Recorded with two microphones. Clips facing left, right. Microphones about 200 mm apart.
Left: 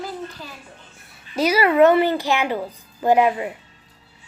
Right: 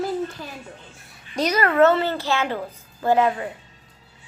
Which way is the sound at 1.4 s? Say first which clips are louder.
Left 2 dB; 10° left (ahead or behind).